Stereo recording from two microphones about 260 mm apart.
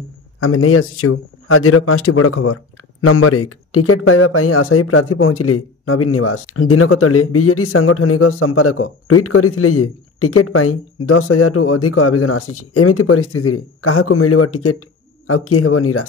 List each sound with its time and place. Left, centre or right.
0.4 s a man's voice: left